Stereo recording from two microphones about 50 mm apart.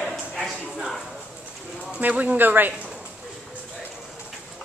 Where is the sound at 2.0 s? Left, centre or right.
Right.